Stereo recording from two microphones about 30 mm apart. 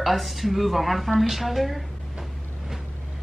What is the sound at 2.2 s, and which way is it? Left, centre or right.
Vehicle, centre.